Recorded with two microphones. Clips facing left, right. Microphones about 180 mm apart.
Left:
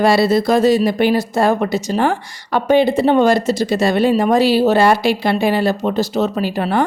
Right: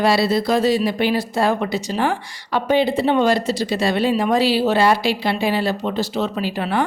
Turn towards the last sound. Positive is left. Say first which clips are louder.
# left 4 dB
turn(degrees=45)  # may be behind; listen again after turning